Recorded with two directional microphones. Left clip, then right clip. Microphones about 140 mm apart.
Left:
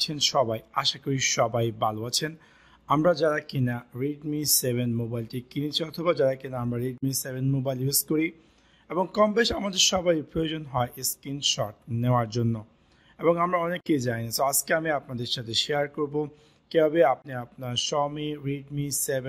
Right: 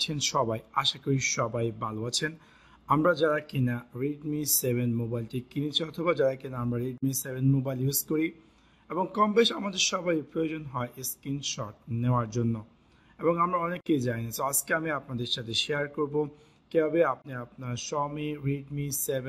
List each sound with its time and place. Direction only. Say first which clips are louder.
0.0 s speech: left 4 dB; 20° left (ahead or behind)